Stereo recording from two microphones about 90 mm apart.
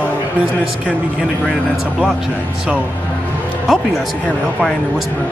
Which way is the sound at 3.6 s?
Centre (ahead or behind).